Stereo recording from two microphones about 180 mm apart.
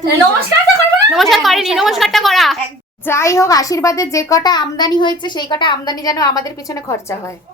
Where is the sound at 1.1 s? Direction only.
Centre (ahead or behind).